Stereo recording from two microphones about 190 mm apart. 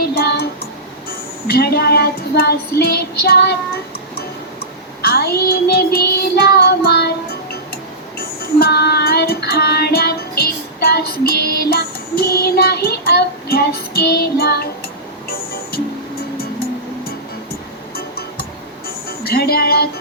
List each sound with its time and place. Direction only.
0.1 s child singing: 55° left (ahead or behind)
5.0 s child singing: 55° left (ahead or behind)
8.5 s music: 55° left (ahead or behind)
19.2 s child singing: 55° left (ahead or behind)